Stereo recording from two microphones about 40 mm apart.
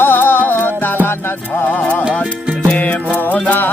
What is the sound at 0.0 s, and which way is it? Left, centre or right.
Music, left.